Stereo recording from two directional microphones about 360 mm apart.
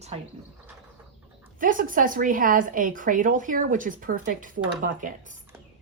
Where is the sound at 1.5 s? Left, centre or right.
Right.